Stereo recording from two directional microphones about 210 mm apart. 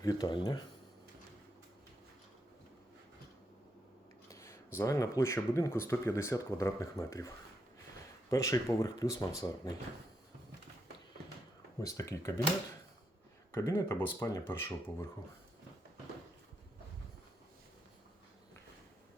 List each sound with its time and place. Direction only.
0.0 s speech: 20° left (ahead or behind)
4.3 s speech: 15° left (ahead or behind)
8.3 s speech: 15° left (ahead or behind)
11.8 s speech: 15° left (ahead or behind)
13.5 s speech: 15° left (ahead or behind)